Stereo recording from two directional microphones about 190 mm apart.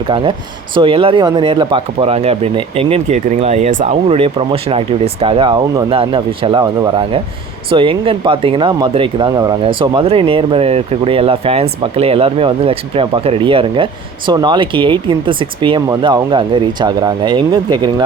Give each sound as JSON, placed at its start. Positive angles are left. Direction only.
{"t": 0.1, "sound": "speech", "side_deg": -25}